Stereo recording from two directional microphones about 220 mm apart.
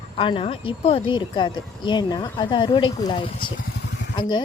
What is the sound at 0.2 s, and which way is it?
Speech, 25° left (ahead or behind).